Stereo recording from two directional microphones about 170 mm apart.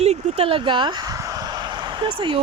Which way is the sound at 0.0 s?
40° right (ahead or behind).